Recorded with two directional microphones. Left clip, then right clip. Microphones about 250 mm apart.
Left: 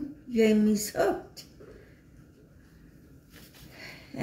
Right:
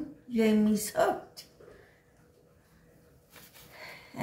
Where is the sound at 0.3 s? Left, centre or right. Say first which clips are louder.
Left 3 dB; right.